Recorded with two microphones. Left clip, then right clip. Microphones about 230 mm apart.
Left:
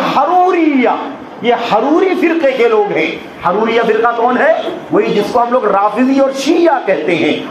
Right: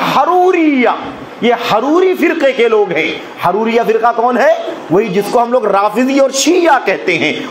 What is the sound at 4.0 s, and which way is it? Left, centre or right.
A man's voice, right.